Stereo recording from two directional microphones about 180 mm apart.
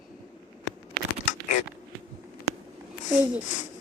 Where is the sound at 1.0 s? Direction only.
60° right (ahead or behind).